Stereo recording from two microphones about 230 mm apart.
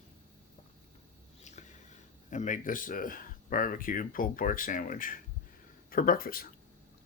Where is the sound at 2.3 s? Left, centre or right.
Left.